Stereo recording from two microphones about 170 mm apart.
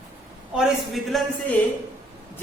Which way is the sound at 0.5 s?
Centre (ahead or behind).